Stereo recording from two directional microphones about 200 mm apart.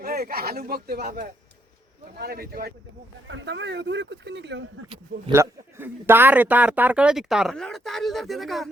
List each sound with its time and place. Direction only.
0.0 s speech: 50° right (ahead or behind)
3.2 s speech: 65° right (ahead or behind)
5.3 s a man's voice: 15° right (ahead or behind)